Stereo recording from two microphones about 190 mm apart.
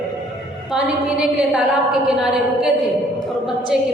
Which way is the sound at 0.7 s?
5° right (ahead or behind).